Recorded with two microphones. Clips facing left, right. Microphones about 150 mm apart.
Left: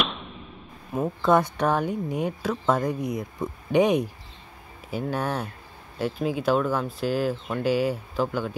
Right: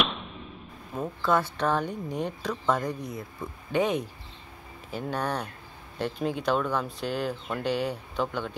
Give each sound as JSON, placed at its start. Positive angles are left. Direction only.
{"t": 1.0, "sound": "speech", "side_deg": 20}